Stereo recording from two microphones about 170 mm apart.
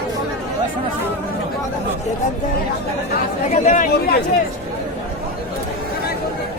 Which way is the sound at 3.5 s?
50° left (ahead or behind).